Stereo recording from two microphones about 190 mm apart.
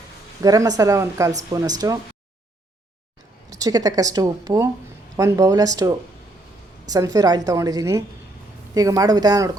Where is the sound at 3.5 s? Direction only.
20° right (ahead or behind).